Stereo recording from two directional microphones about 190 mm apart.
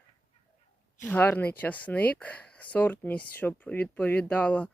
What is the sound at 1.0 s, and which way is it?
Speech, 10° left (ahead or behind).